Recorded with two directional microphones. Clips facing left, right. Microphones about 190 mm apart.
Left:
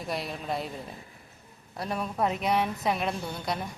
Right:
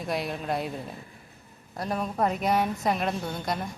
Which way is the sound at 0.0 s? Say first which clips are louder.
Right 3 dB; centre (ahead or behind).